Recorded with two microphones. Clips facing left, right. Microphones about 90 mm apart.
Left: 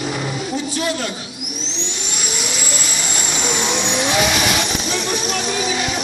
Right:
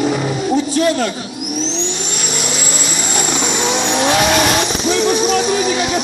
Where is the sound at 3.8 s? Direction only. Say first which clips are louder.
Right 5 dB; 50° right (ahead or behind).